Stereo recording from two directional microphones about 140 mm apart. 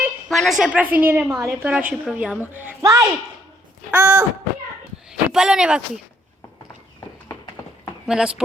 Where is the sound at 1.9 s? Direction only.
5° right (ahead or behind).